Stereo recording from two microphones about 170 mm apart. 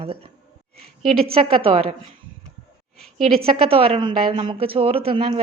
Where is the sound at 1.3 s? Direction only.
35° right (ahead or behind).